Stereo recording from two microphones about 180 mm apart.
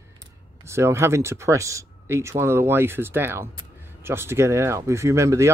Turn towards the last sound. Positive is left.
turn(degrees=-15)  # may be behind; listen again after turning